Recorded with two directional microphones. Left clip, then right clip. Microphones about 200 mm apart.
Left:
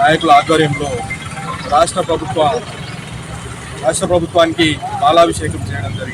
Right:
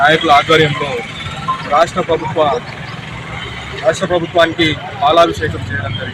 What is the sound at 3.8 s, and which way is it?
Speech, 10° left (ahead or behind).